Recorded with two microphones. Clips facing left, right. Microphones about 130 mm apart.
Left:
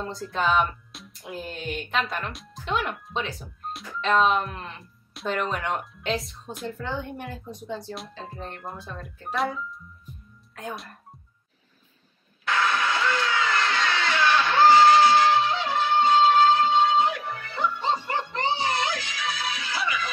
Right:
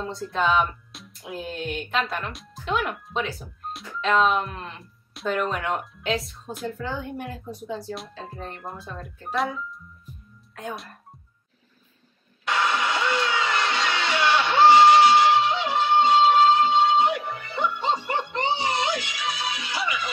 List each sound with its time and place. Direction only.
0.0 s speech: centre (ahead or behind)
12.4 s music: 20° right (ahead or behind)
17.2 s music: centre (ahead or behind)
18.3 s music: 20° right (ahead or behind)